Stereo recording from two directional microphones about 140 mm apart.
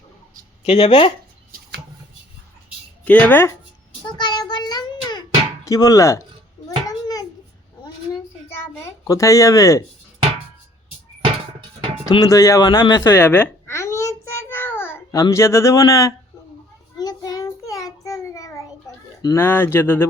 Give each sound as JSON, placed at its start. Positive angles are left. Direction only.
{"t": 0.6, "sound": "speech", "side_deg": 45}
{"t": 3.0, "sound": "speech", "side_deg": 10}
{"t": 4.0, "sound": "child singing", "side_deg": 30}
{"t": 5.6, "sound": "speech", "side_deg": 25}
{"t": 6.7, "sound": "a sound", "side_deg": 25}
{"t": 12.0, "sound": "speech", "side_deg": 30}
{"t": 13.0, "sound": "a sound", "side_deg": 15}
{"t": 17.0, "sound": "child singing", "side_deg": 30}
{"t": 19.2, "sound": "speech", "side_deg": 20}